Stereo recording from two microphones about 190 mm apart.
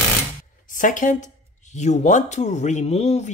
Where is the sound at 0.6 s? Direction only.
45° left (ahead or behind).